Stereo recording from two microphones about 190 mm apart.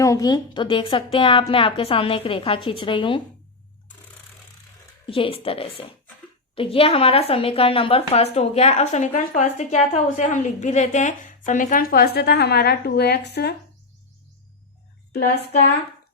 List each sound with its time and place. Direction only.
0.0 s a woman's voice: 20° left (ahead or behind)
5.0 s a woman's voice: 30° left (ahead or behind); by 13.5 s 60° left (ahead or behind)
15.1 s speech: 60° left (ahead or behind)